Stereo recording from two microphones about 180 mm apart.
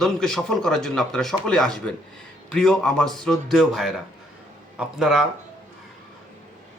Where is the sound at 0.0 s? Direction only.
5° left (ahead or behind).